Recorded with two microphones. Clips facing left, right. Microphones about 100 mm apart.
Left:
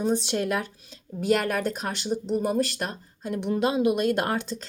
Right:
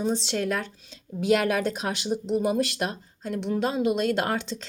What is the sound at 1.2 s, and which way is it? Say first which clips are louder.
Speech: right 1 dB; 5° right (ahead or behind).